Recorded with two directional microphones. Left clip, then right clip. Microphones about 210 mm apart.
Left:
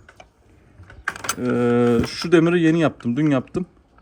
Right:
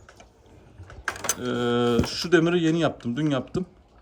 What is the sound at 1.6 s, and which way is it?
Speech, 20° left (ahead or behind).